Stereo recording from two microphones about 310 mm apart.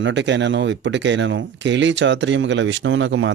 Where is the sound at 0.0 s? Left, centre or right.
Right.